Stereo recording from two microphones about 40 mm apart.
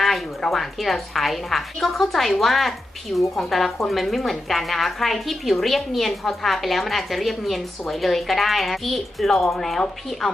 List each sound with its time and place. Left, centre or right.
0.0 s speech: centre